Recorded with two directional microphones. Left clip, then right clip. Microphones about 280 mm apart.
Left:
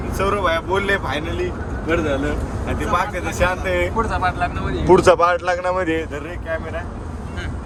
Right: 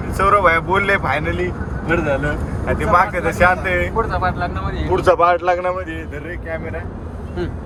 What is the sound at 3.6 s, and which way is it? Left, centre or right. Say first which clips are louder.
Speech: right 1 dB; centre.